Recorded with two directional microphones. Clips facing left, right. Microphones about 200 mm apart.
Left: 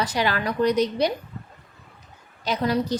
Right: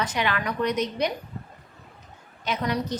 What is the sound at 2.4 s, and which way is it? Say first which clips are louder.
Speech: left 4 dB; 35° left (ahead or behind).